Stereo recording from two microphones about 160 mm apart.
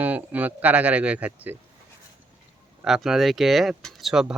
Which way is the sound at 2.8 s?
Centre (ahead or behind).